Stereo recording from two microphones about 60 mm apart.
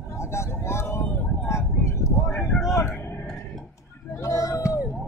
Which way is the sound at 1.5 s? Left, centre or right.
Left.